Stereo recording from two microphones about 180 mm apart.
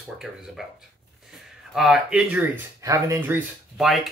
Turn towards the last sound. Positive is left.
turn(degrees=0)  # may be behind; listen again after turning